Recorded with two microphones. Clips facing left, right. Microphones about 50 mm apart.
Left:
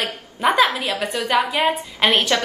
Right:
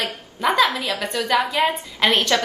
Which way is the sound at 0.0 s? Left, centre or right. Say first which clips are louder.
Left 2 dB; left.